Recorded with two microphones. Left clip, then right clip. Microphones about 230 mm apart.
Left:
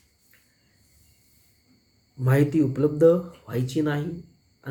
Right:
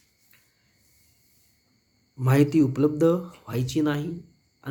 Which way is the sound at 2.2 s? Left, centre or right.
Right.